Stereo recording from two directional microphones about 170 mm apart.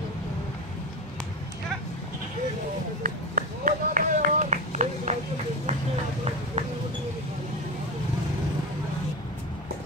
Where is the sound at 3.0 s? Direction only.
55° right (ahead or behind).